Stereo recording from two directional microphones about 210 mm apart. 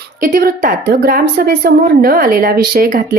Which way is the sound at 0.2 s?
40° right (ahead or behind).